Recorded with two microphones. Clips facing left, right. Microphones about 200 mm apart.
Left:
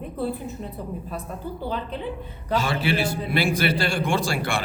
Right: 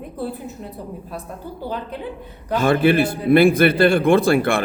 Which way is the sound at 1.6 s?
10° right (ahead or behind).